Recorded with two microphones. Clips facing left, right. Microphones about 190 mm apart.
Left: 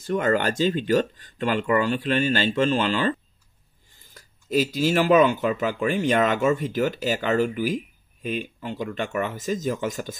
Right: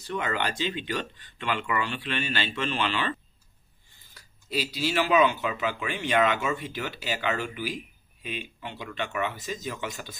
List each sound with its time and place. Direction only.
0.0 s speech: 45° left (ahead or behind)